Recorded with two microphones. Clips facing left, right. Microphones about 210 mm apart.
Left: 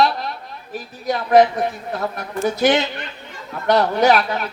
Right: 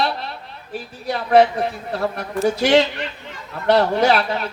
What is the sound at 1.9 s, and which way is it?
Speech, 35° right (ahead or behind).